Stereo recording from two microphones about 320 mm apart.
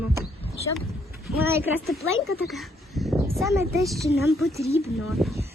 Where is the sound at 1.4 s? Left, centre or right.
Centre.